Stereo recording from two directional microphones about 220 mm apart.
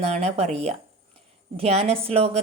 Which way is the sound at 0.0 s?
30° right (ahead or behind).